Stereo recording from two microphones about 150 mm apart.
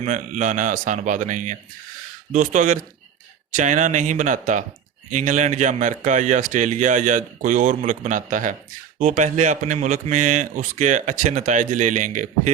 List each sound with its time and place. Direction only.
0.0 s speech: 55° right (ahead or behind)